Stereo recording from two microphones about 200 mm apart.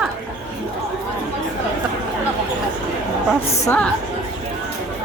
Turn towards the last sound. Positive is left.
turn(degrees=10)  # may be behind; listen again after turning